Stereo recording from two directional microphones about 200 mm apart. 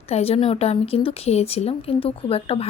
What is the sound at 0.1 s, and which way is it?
A woman's voice, 30° left (ahead or behind).